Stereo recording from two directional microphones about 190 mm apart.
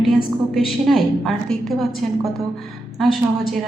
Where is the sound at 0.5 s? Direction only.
Centre (ahead or behind).